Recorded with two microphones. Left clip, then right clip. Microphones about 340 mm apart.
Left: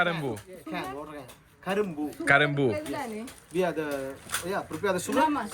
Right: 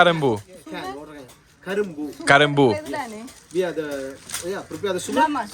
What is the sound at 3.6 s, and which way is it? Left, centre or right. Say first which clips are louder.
Speech: right 4 dB; centre.